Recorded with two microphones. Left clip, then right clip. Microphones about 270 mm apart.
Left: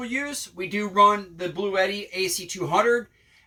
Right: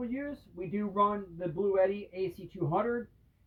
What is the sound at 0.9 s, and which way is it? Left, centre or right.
Speech, centre.